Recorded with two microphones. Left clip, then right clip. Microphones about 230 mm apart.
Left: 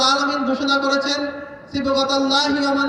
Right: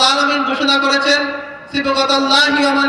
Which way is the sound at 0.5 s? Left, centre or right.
Right.